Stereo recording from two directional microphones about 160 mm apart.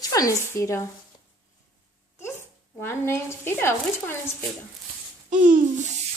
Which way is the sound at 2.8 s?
15° left (ahead or behind).